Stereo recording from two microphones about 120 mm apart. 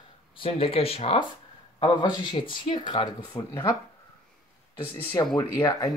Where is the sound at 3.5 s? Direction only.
25° left (ahead or behind).